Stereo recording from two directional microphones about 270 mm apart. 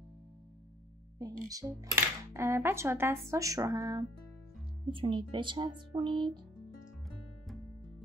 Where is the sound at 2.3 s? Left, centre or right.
Centre.